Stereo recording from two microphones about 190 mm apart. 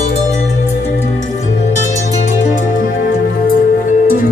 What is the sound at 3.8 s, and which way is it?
Music, 45° left (ahead or behind).